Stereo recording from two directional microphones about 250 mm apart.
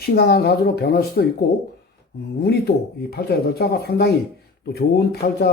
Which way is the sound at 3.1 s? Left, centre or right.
Left.